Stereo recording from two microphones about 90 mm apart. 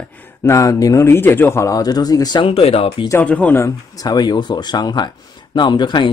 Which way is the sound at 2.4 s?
90° left.